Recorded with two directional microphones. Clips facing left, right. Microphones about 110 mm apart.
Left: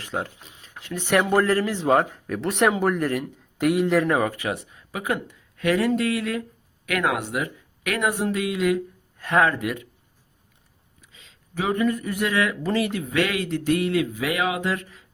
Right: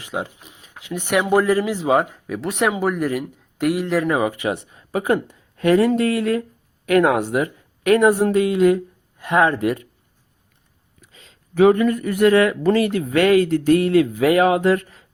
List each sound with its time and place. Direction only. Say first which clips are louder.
0.0 s speech: right 2 dB; 15° right (ahead or behind)
4.3 s speech: right 5 dB; 20° right (ahead or behind)
9.1 s speech: right 3 dB; 15° right (ahead or behind)
9.5 s speech: right 6 dB; 35° right (ahead or behind)
11.0 s a sound: right 4 dB; 45° right (ahead or behind)
11.5 s a man's voice: right 9 dB; 65° right (ahead or behind); by 15.0 s 45° right (ahead or behind)